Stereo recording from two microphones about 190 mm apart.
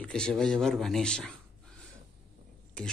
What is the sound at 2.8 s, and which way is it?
Speech, 5° left (ahead or behind).